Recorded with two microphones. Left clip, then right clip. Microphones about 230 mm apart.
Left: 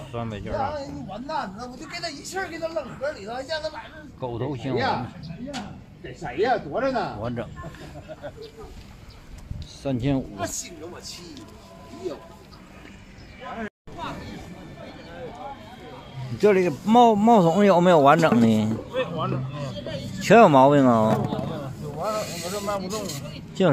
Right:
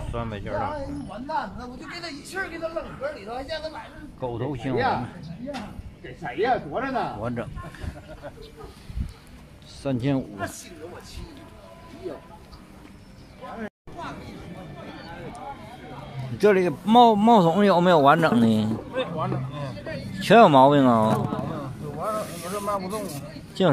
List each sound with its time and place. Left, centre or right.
0.1 s a man's voice: centre
1.2 s a man's voice: left
4.2 s a man's voice: centre
6.2 s a man's voice: left
7.2 s a man's voice: centre
9.8 s a man's voice: centre
10.3 s speech: left
16.3 s a man's voice: centre
18.9 s a sound: centre
20.2 s a man's voice: centre
22.0 s snake: centre
23.6 s a man's voice: centre